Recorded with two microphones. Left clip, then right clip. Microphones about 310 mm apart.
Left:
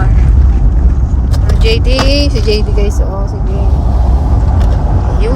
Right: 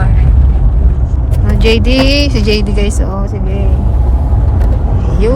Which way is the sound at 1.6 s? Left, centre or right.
Right.